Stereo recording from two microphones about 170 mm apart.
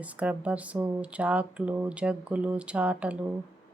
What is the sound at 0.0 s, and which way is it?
Speech, 10° right (ahead or behind).